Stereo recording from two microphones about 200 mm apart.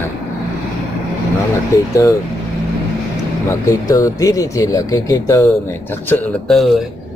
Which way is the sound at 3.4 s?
15° left (ahead or behind).